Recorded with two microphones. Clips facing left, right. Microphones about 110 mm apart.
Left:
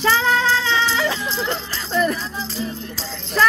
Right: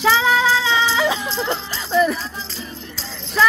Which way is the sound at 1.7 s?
5° right (ahead or behind).